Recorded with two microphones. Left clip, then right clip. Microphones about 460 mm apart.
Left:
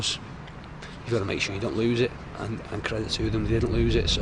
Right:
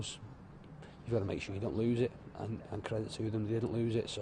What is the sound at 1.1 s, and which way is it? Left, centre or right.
Speech, left.